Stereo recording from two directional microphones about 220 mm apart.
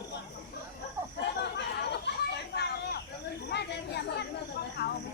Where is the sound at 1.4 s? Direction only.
50° left (ahead or behind).